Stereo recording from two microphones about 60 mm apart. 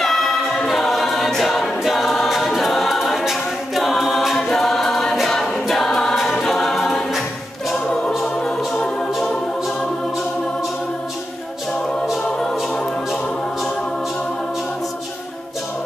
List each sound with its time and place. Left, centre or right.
0.0 s choir: centre
7.7 s choir: centre
8.4 s music: centre